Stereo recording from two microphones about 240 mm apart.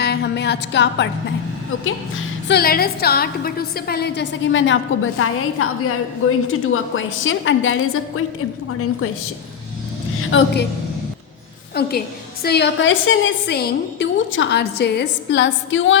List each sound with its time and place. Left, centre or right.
0.0 s a woman's voice: left
2.5 s a woman's voice: left
10.2 s a woman's voice: left
11.7 s a woman's voice: left